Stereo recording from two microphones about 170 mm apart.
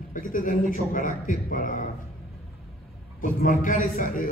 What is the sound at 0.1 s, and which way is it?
A man's voice, 55° left (ahead or behind).